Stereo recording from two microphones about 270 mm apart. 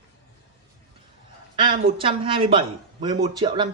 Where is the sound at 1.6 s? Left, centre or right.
Centre.